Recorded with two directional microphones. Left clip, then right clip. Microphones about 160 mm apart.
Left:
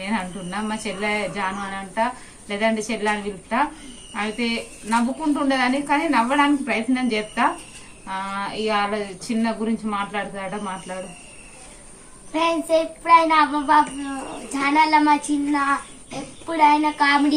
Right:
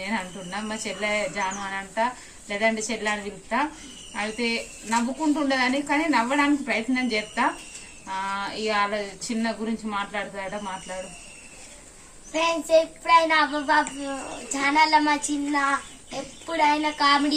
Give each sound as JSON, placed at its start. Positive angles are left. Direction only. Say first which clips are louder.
{"t": 0.0, "sound": "speech", "louder": "left 3 dB", "side_deg": 10}
{"t": 12.3, "sound": "a child's voice", "louder": "left 1 dB", "side_deg": -15}